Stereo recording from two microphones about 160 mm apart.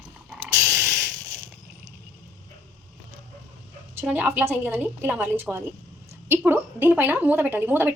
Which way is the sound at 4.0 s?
10° right (ahead or behind).